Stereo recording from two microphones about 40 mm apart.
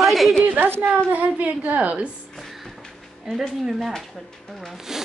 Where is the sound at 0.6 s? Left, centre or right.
Right.